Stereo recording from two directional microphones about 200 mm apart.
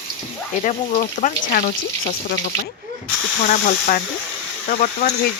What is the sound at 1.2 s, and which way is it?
Speech, 45° left (ahead or behind).